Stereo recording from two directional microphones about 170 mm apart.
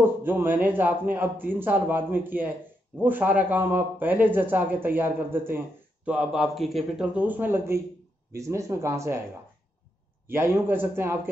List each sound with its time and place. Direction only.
0.0 s a man's voice: 10° right (ahead or behind)
10.2 s a man's voice: 15° right (ahead or behind)